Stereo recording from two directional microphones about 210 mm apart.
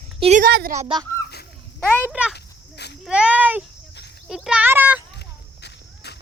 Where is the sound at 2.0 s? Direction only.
5° right (ahead or behind).